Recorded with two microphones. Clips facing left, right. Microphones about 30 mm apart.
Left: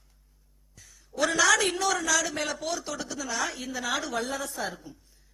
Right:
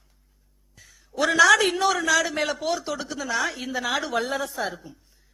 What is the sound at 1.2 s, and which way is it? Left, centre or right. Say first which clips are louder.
A man's voice: right 6 dB; centre.